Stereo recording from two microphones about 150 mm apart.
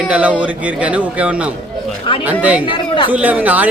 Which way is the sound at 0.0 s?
10° right (ahead or behind).